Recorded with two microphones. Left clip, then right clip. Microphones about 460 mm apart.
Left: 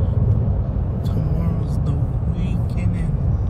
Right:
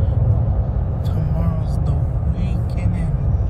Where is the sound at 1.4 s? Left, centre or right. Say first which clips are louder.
Even; centre.